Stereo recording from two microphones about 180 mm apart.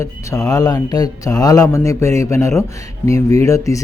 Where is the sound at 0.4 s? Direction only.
20° left (ahead or behind).